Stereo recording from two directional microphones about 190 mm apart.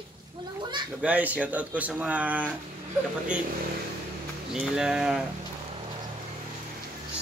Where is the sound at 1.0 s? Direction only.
10° right (ahead or behind).